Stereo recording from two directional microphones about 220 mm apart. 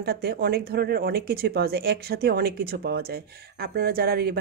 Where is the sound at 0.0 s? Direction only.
45° right (ahead or behind).